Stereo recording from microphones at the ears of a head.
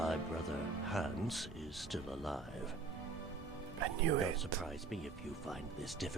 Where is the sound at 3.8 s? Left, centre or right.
Right.